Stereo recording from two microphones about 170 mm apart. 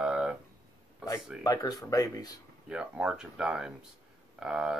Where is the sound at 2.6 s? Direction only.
5° right (ahead or behind).